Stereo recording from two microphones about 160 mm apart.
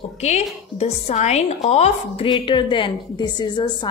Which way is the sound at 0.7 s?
45° left (ahead or behind).